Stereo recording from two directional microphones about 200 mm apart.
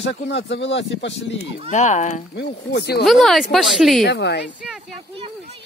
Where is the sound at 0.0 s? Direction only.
65° left (ahead or behind).